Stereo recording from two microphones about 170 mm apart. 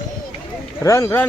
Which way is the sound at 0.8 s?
15° left (ahead or behind).